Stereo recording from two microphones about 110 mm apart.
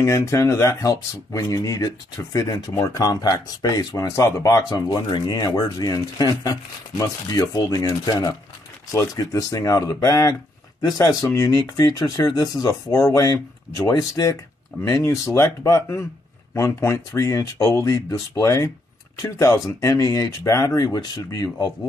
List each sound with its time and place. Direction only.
0.0 s speech: 30° left (ahead or behind)